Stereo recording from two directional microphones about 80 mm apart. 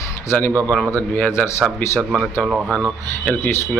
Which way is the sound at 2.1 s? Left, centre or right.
Centre.